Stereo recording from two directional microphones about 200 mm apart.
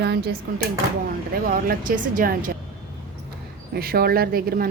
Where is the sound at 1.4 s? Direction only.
45° right (ahead or behind).